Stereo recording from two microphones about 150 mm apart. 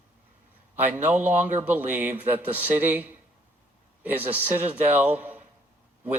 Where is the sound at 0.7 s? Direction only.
10° right (ahead or behind).